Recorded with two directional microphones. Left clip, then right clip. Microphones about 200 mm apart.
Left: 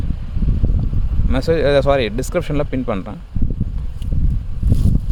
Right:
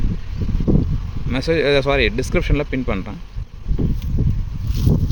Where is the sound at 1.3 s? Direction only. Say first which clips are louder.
Left 2 dB; 10° left (ahead or behind).